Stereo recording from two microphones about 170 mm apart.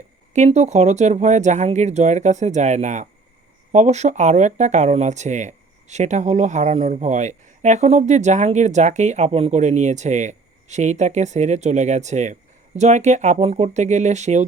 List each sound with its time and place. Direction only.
0.3 s speech: 40° right (ahead or behind)